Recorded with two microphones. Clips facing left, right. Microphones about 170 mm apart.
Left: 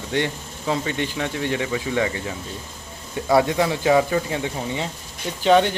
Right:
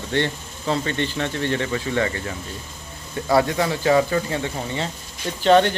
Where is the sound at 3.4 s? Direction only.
20° left (ahead or behind).